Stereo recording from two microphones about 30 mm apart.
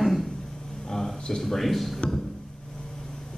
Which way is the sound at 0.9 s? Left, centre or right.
Centre.